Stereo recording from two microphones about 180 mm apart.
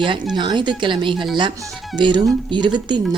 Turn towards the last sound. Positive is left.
turn(degrees=-25)  # may be behind; listen again after turning